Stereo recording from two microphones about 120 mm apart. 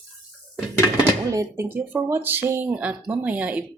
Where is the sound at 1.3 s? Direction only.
20° right (ahead or behind).